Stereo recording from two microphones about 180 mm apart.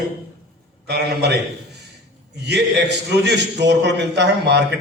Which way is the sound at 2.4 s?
70° right (ahead or behind).